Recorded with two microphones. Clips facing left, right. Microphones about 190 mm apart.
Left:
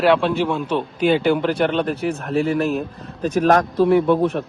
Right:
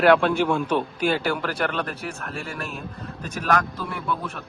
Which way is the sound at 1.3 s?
20° left (ahead or behind).